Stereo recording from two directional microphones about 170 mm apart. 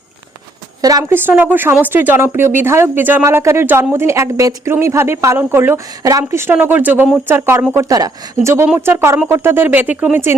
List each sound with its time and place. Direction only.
0.8 s speech: 20° right (ahead or behind)
8.6 s speech: 10° right (ahead or behind)